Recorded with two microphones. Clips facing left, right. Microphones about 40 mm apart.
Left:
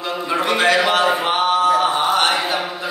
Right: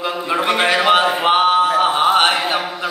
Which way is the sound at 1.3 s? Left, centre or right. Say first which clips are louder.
Right 4 dB; right.